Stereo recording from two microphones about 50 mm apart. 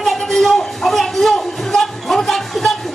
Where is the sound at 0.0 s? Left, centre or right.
Centre.